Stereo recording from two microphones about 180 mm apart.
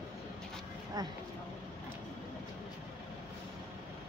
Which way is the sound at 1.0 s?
20° right (ahead or behind).